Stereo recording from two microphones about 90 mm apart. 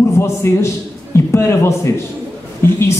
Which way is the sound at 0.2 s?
30° left (ahead or behind).